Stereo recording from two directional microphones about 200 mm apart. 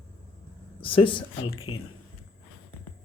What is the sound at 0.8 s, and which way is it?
Speech, 25° left (ahead or behind).